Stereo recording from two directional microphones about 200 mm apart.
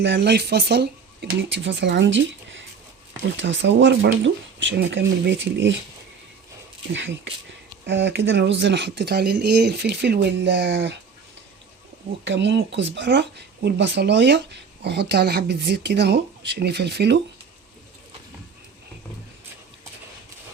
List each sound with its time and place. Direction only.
0.0 s speech: 60° right (ahead or behind)
6.9 s speech: 65° right (ahead or behind)
12.2 s speech: 60° right (ahead or behind)